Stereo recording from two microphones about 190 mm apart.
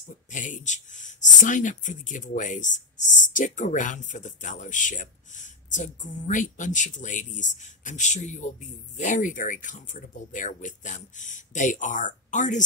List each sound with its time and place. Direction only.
0.3 s speech: 40° left (ahead or behind)